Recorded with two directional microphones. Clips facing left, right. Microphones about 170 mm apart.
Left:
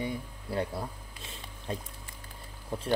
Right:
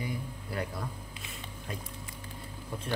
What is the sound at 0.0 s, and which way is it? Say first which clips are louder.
Speech: left 2 dB; 25° left (ahead or behind).